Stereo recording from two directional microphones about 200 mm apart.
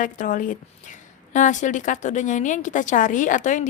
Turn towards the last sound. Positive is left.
turn(degrees=40)  # may be behind; listen again after turning